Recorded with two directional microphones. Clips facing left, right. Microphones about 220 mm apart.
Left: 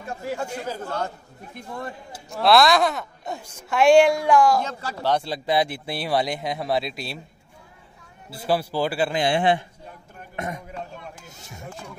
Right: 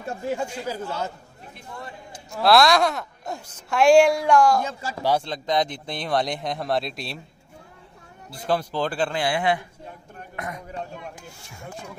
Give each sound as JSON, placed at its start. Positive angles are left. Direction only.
{"t": 0.3, "sound": "speech", "side_deg": -15}
{"t": 2.3, "sound": "a woman's voice", "side_deg": 0}
{"t": 4.6, "sound": "speech", "side_deg": -10}
{"t": 5.2, "sound": "a woman's voice", "side_deg": 10}
{"t": 8.5, "sound": "a man's voice", "side_deg": 10}
{"t": 9.2, "sound": "a man's voice", "side_deg": 25}